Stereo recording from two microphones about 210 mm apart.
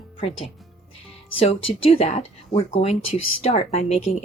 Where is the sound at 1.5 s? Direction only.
30° left (ahead or behind).